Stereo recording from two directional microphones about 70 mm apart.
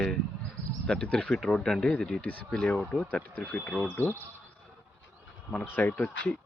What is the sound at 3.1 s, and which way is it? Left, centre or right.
Speech, left.